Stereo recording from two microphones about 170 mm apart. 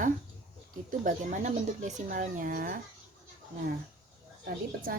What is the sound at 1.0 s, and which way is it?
Speech, 45° right (ahead or behind).